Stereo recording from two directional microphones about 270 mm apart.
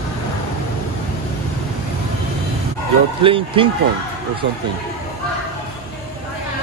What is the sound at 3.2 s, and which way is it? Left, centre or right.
Speech, centre.